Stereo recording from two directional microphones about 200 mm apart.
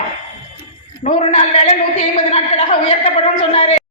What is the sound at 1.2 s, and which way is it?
A woman's voice, 30° left (ahead or behind).